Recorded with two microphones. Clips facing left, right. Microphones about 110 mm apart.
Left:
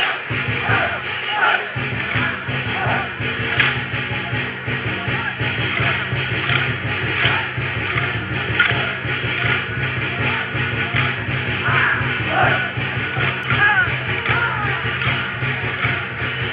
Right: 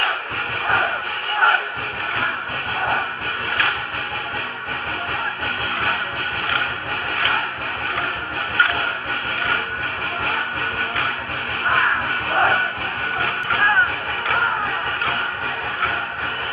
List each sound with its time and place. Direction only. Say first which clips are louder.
8.5 s music: right 1 dB; 35° right (ahead or behind)
11.7 s music: right 1 dB; 45° right (ahead or behind)